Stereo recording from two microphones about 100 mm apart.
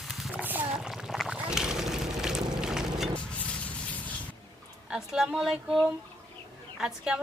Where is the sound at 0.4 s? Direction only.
15° right (ahead or behind).